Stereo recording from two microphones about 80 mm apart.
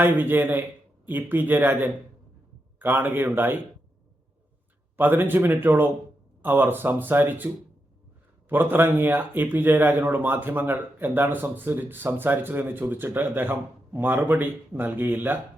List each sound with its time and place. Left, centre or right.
0.0 s speech: right
4.9 s speech: right